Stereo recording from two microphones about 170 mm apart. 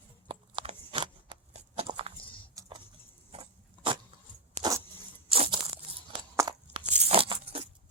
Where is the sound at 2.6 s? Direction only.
20° right (ahead or behind).